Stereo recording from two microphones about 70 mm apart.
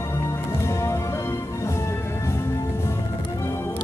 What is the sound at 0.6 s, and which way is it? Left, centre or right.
Music, left.